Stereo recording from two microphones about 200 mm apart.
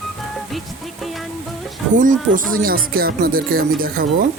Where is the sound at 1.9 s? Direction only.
40° right (ahead or behind).